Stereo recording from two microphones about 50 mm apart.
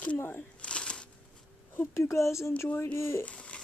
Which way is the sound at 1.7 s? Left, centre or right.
Left.